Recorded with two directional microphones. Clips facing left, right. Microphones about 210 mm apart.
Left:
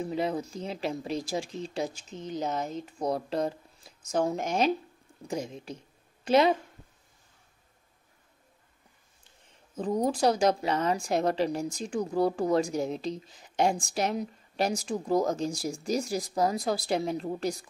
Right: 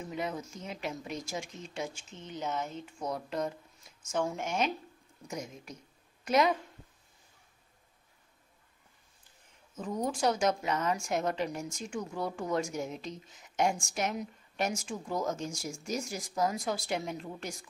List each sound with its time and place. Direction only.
0.0 s a woman's voice: 35° left (ahead or behind)
9.8 s a woman's voice: 35° left (ahead or behind)